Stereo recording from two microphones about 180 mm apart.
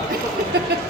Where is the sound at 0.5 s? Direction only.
65° right (ahead or behind).